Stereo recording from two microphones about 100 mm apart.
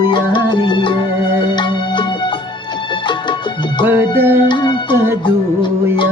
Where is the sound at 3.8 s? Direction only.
20° right (ahead or behind).